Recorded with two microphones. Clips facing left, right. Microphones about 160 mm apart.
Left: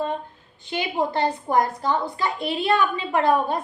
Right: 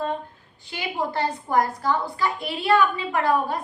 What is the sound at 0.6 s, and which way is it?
A woman's voice, 20° left (ahead or behind).